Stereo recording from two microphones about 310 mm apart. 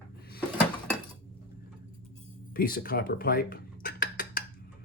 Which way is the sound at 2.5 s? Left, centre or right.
Left.